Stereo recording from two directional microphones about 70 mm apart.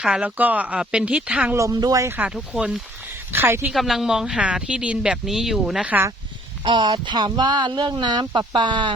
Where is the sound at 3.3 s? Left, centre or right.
Right.